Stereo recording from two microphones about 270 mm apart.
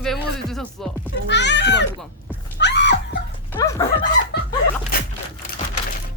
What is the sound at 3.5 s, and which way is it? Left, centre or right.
Speech, centre.